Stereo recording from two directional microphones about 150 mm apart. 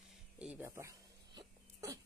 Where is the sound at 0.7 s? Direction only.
20° right (ahead or behind).